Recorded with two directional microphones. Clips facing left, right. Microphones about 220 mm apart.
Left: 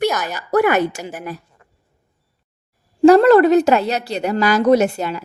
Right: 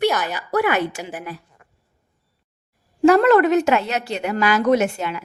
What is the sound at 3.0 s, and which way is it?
A woman's voice, 35° left (ahead or behind).